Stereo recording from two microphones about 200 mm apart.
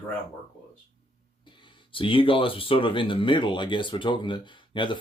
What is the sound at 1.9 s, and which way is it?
Speech, 25° left (ahead or behind).